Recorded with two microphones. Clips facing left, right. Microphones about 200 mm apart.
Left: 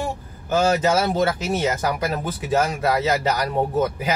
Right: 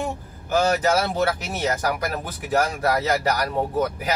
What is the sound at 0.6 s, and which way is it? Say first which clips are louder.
Speech: left 1 dB; 25° left (ahead or behind).